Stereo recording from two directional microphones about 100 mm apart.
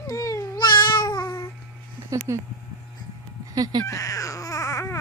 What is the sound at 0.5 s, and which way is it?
Cat, 50° left (ahead or behind).